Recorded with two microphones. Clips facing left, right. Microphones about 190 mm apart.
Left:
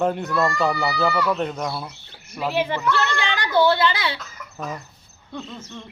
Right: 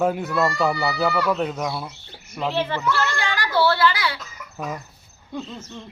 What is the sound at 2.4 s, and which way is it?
Speech, 10° left (ahead or behind).